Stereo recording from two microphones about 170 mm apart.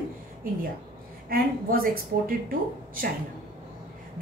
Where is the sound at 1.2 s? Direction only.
60° right (ahead or behind).